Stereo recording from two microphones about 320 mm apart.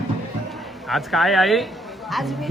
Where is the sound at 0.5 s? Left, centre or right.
Centre.